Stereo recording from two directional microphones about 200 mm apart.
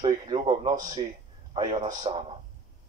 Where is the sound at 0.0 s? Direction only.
25° right (ahead or behind).